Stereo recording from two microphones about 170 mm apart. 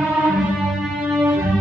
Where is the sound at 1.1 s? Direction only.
5° right (ahead or behind).